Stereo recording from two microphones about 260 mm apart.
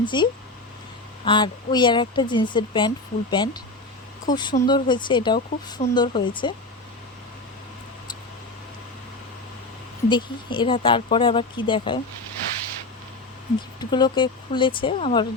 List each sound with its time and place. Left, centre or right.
0.0 s a woman's voice: centre
10.1 s speech: centre
13.6 s speech: centre